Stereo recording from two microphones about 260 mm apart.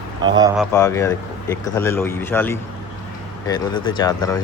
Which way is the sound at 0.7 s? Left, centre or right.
Centre.